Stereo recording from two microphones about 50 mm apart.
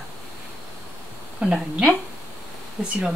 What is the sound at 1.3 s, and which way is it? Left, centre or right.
A woman's voice, centre.